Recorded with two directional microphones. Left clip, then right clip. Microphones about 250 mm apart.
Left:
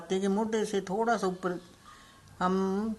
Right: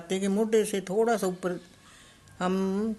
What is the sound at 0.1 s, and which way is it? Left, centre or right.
Speech, right.